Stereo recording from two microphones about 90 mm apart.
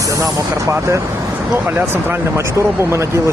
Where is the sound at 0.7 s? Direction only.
35° right (ahead or behind).